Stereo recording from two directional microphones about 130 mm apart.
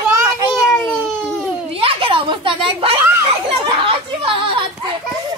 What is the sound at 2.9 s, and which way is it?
Children playing, 20° right (ahead or behind).